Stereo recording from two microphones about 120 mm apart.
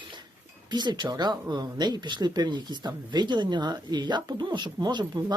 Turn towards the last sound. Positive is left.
turn(degrees=-35)  # may be behind; listen again after turning